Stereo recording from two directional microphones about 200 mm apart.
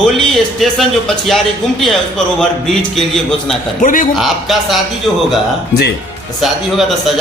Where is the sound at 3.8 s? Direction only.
40° left (ahead or behind).